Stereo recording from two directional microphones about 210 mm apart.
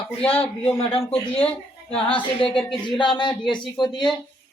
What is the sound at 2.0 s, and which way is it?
A woman's voice, 25° left (ahead or behind).